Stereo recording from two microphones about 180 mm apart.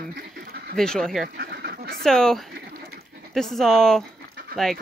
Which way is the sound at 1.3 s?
60° right (ahead or behind).